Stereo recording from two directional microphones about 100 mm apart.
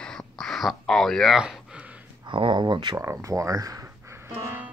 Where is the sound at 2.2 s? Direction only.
55° right (ahead or behind).